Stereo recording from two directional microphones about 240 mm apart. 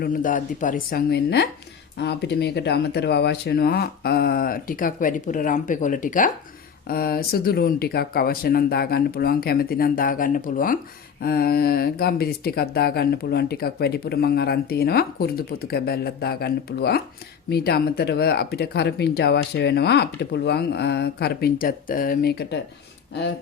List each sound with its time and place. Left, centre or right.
0.0 s speech: left